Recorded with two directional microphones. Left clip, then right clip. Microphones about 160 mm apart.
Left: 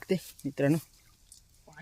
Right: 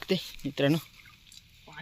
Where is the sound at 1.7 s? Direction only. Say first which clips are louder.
Right 5 dB; 15° left (ahead or behind).